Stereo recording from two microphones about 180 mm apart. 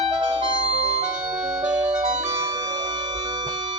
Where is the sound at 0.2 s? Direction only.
30° right (ahead or behind).